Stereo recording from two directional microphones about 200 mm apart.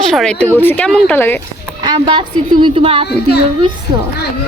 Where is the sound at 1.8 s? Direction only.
20° right (ahead or behind).